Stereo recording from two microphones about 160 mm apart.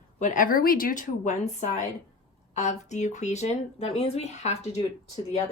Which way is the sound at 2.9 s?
45° left (ahead or behind).